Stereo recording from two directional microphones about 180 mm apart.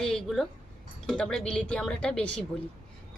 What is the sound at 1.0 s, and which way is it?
A woman's voice, 5° left (ahead or behind).